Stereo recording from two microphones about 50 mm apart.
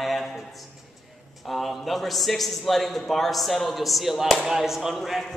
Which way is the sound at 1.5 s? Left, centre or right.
Centre.